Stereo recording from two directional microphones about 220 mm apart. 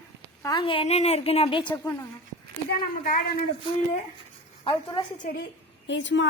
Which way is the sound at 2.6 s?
40° left (ahead or behind).